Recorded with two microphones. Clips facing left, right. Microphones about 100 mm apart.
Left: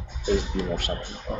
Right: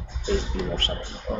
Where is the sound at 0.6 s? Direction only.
15° left (ahead or behind).